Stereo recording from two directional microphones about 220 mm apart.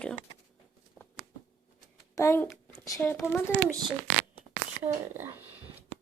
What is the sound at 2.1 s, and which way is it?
A child's voice, 10° left (ahead or behind).